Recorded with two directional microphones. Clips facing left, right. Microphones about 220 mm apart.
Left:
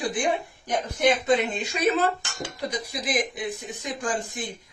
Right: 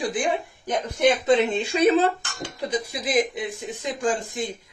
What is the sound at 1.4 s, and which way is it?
Speech, 30° right (ahead or behind).